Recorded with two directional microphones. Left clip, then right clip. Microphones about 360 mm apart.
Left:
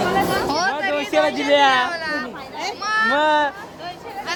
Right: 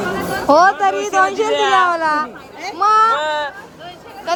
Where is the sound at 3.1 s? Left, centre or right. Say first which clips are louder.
Left 1 dB; left.